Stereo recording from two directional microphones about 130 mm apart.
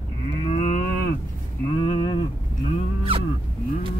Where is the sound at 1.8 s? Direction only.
35° left (ahead or behind).